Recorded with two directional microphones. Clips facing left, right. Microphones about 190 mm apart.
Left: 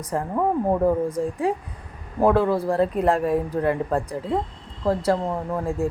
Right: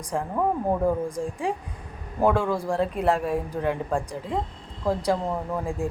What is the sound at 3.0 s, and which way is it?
Speech, 10° right (ahead or behind).